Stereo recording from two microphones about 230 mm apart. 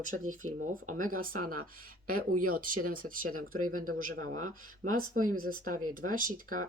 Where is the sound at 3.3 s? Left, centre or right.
Right.